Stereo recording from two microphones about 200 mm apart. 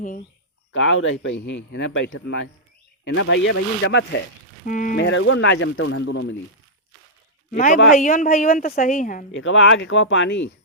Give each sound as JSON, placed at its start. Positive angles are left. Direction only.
{"t": 0.7, "sound": "speech", "side_deg": 70}
{"t": 4.6, "sound": "a woman's voice", "side_deg": 40}
{"t": 5.0, "sound": "speech", "side_deg": 75}
{"t": 7.5, "sound": "a woman's voice", "side_deg": 40}
{"t": 9.3, "sound": "speech", "side_deg": 70}